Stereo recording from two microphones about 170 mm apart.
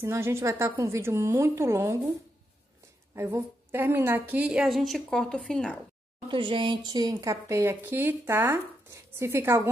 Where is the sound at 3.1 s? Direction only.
15° right (ahead or behind); by 5.7 s 5° left (ahead or behind).